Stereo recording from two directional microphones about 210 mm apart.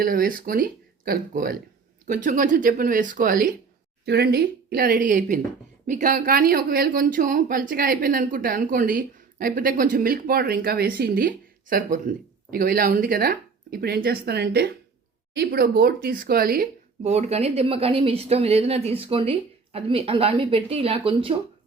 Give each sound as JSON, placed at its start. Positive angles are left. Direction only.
{"t": 0.0, "sound": "speech", "side_deg": -45}